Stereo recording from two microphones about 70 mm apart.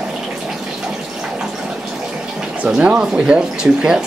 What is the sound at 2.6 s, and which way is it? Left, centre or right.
Speech, centre.